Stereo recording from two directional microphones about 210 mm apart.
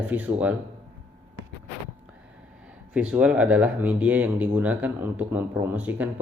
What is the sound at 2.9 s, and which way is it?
Speech, 5° right (ahead or behind).